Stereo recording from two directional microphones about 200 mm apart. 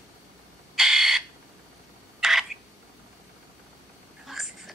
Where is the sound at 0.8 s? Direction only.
Centre (ahead or behind).